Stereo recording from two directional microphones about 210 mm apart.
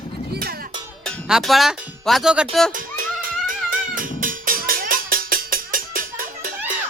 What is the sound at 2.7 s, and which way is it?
Music, 40° right (ahead or behind).